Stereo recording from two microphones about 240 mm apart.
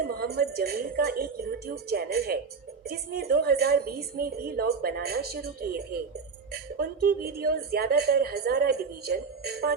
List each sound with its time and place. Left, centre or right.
0.0 s a woman's voice: right